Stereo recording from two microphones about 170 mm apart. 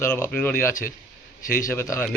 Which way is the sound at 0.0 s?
15° left (ahead or behind).